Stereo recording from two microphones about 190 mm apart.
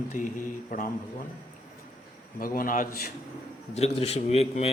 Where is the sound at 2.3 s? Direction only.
45° left (ahead or behind).